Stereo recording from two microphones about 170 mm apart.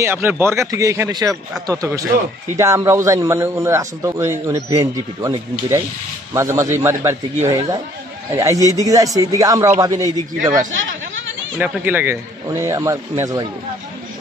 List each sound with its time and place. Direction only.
0.0 s a man's voice: 15° right (ahead or behind)
10.7 s a sound: 90° right
11.5 s a man's voice: 10° right (ahead or behind)